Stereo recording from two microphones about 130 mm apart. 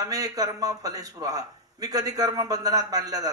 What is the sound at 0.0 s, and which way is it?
A man's voice, 25° right (ahead or behind).